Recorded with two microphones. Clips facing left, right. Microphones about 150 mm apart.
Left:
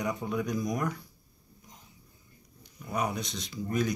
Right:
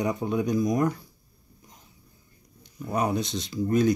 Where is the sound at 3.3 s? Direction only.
Centre (ahead or behind).